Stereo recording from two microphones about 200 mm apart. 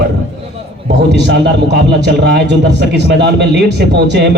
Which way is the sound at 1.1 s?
60° right (ahead or behind).